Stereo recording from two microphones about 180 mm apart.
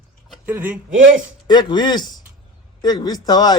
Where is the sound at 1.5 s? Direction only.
25° left (ahead or behind).